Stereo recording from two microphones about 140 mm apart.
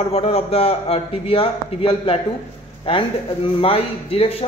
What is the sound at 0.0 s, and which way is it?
A man's voice, 45° left (ahead or behind).